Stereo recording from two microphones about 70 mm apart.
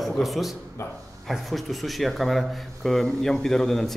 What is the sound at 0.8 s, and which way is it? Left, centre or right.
Speech, left.